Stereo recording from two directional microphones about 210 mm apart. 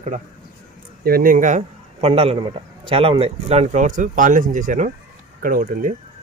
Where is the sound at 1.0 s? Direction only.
45° right (ahead or behind).